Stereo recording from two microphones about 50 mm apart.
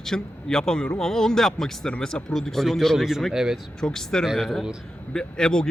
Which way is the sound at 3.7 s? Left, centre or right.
Centre.